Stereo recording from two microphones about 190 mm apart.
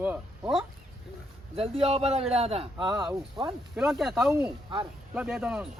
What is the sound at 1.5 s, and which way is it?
A man's voice, 30° right (ahead or behind).